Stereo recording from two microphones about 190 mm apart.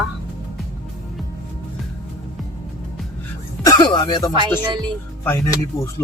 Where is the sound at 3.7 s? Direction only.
20° left (ahead or behind).